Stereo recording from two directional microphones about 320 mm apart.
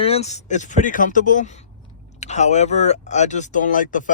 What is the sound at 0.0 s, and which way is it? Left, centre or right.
Speech, centre.